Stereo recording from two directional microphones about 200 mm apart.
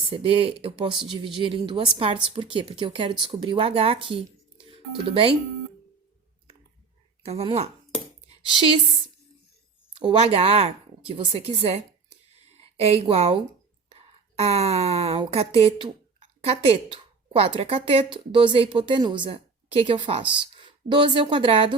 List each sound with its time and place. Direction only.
0.1 s speech: 25° right (ahead or behind)
7.2 s speech: 30° right (ahead or behind)
9.9 s a woman's voice: 25° right (ahead or behind)